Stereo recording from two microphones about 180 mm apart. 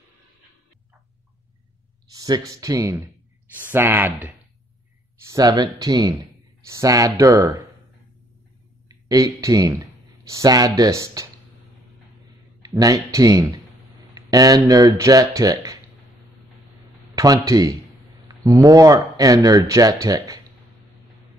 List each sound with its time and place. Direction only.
2.1 s speech: 20° right (ahead or behind)
8.8 s speech: 20° right (ahead or behind)
12.6 s speech: 20° right (ahead or behind)
17.1 s speech: 20° right (ahead or behind)